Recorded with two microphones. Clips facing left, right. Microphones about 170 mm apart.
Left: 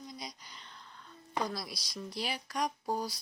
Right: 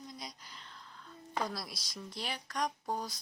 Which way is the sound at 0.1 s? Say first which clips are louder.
Left 2 dB; centre (ahead or behind).